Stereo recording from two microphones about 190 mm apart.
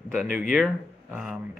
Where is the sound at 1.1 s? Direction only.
5° right (ahead or behind).